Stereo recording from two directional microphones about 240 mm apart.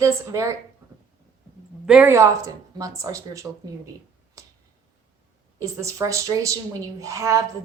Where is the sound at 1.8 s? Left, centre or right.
Centre.